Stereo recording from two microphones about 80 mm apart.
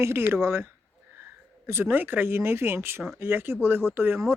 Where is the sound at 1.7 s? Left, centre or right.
Right.